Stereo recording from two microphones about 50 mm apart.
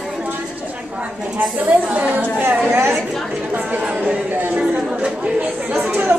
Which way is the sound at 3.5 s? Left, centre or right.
Right.